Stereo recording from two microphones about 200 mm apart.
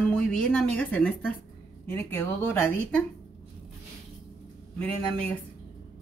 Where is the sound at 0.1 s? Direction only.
5° left (ahead or behind).